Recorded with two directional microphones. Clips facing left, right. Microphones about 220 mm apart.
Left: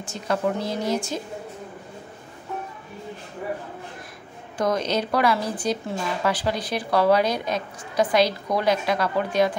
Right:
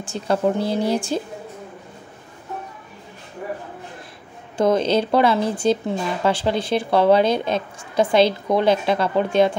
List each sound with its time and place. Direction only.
0.0 s speech: 30° right (ahead or behind)
4.6 s a woman's voice: 25° right (ahead or behind)